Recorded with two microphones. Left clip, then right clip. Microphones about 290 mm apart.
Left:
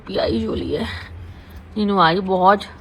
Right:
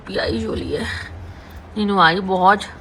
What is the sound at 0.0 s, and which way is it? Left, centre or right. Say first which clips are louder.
Speech: left 1 dB; centre.